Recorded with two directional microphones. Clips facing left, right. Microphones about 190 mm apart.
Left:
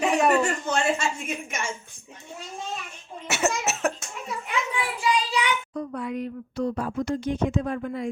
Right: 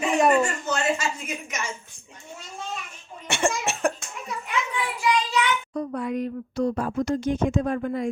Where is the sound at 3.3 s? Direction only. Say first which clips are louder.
Even; 5° left (ahead or behind).